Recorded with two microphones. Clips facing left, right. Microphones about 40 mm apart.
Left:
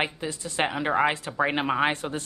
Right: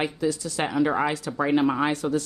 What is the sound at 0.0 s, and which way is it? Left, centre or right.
Speech, left.